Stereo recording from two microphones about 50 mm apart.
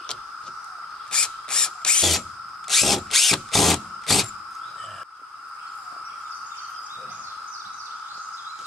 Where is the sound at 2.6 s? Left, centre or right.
Centre.